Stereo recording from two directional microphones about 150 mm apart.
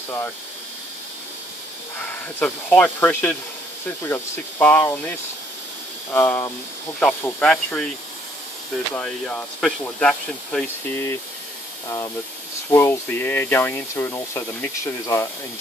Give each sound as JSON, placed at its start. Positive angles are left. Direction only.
{"t": 2.0, "sound": "speech", "side_deg": 10}
{"t": 6.1, "sound": "speech", "side_deg": 15}
{"t": 8.9, "sound": "speech", "side_deg": 5}
{"t": 12.7, "sound": "speech", "side_deg": 15}